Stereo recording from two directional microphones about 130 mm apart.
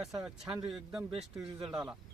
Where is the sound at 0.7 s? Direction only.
5° right (ahead or behind).